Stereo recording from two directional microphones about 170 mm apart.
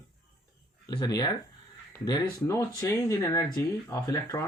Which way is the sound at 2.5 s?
15° left (ahead or behind).